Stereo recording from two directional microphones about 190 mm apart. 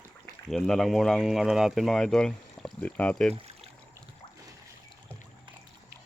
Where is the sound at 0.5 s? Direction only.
Centre (ahead or behind).